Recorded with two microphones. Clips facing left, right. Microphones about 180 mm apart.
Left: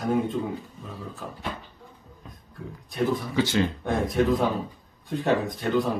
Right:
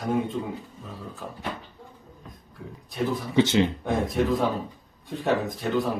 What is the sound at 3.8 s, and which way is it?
Speech, centre (ahead or behind).